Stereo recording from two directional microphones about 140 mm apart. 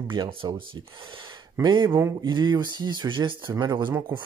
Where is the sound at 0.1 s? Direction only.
35° right (ahead or behind).